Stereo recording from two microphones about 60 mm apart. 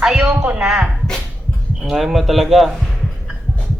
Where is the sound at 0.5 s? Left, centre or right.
Centre.